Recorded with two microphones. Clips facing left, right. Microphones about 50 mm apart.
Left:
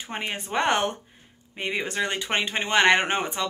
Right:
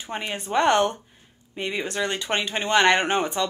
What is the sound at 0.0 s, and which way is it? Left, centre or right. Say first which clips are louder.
A woman's voice: right 1 dB; left.